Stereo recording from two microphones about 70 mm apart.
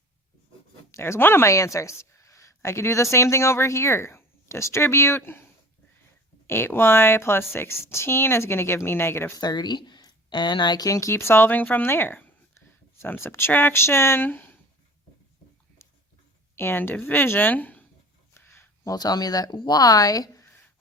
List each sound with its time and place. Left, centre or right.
0.9 s speech: left
6.5 s a woman's voice: left
9.4 s speech: left
10.8 s a woman's voice: left
16.6 s a woman's voice: left
18.4 s a sound: left
18.9 s speech: left